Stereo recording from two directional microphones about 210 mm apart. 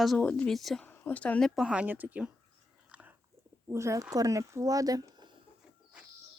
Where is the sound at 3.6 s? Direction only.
15° right (ahead or behind).